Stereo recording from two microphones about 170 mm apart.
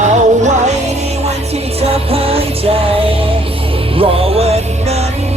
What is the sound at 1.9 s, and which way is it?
Music, 35° right (ahead or behind).